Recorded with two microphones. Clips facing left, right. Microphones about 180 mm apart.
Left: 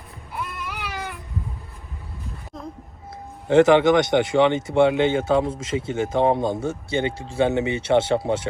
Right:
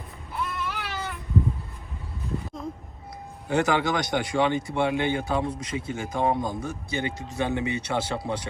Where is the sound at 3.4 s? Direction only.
25° left (ahead or behind).